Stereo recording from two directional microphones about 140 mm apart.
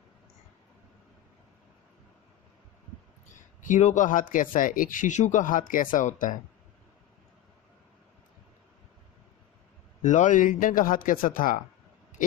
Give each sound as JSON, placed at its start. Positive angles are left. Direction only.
{"t": 3.6, "sound": "speech", "side_deg": 60}
{"t": 10.0, "sound": "speech", "side_deg": 60}